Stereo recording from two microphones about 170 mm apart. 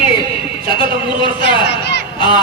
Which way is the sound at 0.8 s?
30° left (ahead or behind).